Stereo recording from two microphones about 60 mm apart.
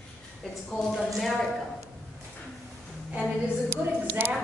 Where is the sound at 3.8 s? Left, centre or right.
Right.